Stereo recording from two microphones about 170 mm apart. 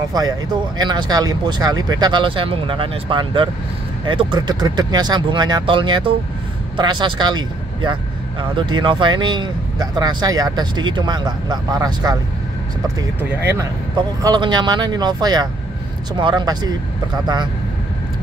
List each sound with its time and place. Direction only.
0.1 s speech: 25° right (ahead or behind)
13.2 s speech: 10° right (ahead or behind)
13.9 s speech: 25° right (ahead or behind)